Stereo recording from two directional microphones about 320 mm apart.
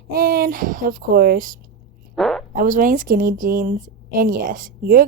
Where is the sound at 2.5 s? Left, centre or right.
Right.